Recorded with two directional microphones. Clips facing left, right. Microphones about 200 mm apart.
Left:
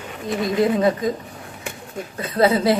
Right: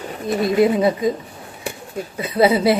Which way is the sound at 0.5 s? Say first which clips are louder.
Right 2 dB; 10° right (ahead or behind).